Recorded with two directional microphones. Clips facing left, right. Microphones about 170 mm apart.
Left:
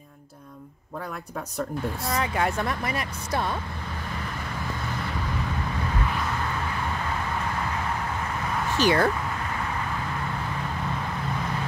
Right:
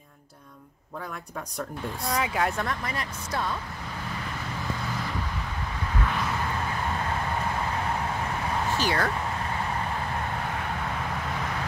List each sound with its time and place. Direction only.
2.0 s speech: centre (ahead or behind)
2.6 s a woman's voice: 10° left (ahead or behind)
8.7 s speech: 20° left (ahead or behind)